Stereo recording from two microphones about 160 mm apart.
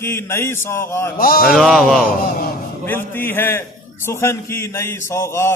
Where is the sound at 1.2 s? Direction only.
65° left (ahead or behind).